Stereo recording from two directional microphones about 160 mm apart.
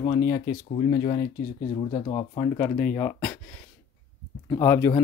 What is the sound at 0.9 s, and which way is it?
Speech, 35° left (ahead or behind).